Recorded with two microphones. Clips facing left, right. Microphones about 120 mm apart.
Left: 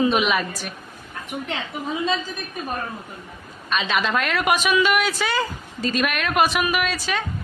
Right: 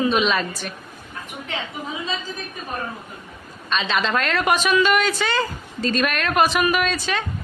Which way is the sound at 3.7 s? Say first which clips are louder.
Even; 10° left (ahead or behind).